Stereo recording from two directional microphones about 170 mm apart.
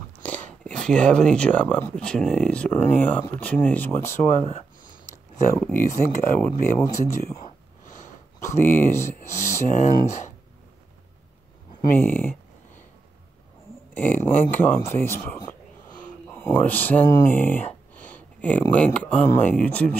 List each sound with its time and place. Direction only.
0.2 s speech: 10° left (ahead or behind)
4.4 s speech: 40° left (ahead or behind)
5.6 s speech: 10° left (ahead or behind)
9.7 s speech: 45° left (ahead or behind)
12.0 s speech: 10° left (ahead or behind)
13.9 s speech: 10° left (ahead or behind)
16.3 s speech: 15° left (ahead or behind)